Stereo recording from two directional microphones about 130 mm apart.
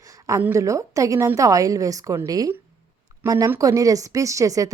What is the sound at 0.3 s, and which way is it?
A woman's voice, 20° right (ahead or behind).